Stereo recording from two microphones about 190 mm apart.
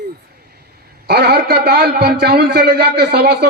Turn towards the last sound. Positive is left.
turn(degrees=-60)  # may be behind; listen again after turning